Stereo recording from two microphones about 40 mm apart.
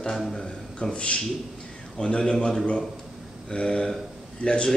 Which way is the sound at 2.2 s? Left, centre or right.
Centre.